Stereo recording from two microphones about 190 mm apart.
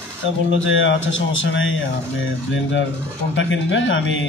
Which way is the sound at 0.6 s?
85° left.